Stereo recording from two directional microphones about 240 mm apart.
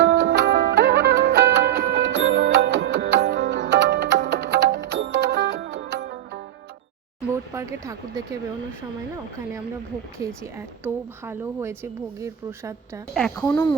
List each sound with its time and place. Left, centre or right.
0.0 s music: right
7.5 s speech: centre
10.2 s a woman's voice: centre
13.1 s speech: centre